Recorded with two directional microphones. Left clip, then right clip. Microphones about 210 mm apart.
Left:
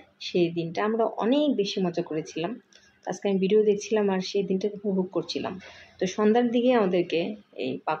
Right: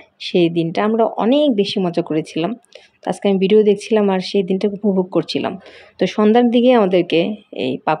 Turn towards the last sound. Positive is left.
turn(degrees=-45)  # may be behind; listen again after turning